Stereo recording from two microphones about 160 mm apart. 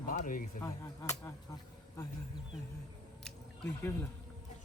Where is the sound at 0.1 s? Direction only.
60° left (ahead or behind).